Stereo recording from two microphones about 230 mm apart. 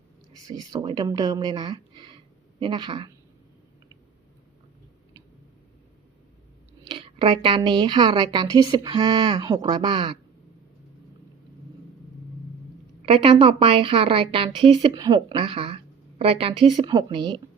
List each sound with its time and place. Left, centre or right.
0.4 s a woman's voice: centre
6.8 s a woman's voice: right
13.1 s a woman's voice: right